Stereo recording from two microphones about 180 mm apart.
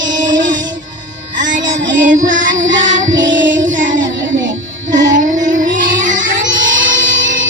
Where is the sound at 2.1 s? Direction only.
45° right (ahead or behind).